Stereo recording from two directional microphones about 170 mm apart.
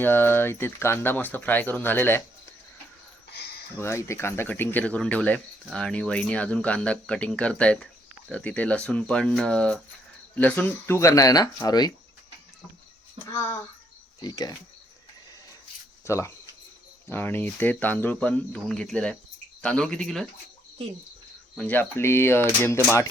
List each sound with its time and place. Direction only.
0.0 s speech: 15° left (ahead or behind)
3.3 s a sound: 70° left (ahead or behind)
3.8 s speech: 15° left (ahead or behind)
13.3 s speech: 15° left (ahead or behind)
16.0 s speech: 15° left (ahead or behind)
21.5 s speech: 10° left (ahead or behind)